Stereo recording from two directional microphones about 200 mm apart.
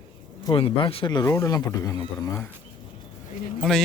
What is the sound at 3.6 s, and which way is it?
Speech, centre (ahead or behind).